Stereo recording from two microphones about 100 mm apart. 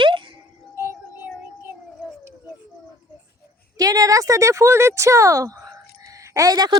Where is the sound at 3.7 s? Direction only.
35° right (ahead or behind).